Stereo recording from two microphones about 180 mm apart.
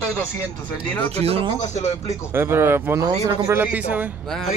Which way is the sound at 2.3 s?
15° right (ahead or behind).